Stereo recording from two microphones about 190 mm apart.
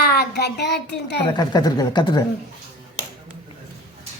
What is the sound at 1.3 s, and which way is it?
Speech, 20° left (ahead or behind).